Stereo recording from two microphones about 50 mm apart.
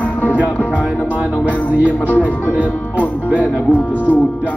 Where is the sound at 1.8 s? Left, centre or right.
Left.